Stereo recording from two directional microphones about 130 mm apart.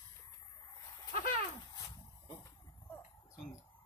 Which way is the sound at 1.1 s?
90° left.